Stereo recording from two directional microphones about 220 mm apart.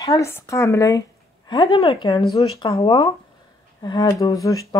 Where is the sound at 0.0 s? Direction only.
15° left (ahead or behind).